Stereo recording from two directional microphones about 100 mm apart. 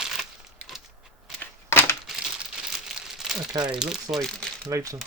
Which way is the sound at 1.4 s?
25° left (ahead or behind).